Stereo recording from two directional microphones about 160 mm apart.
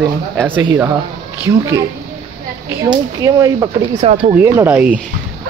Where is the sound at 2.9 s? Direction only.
20° right (ahead or behind).